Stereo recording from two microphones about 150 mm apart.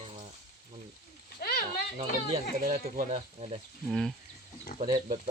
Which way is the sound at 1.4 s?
90° left.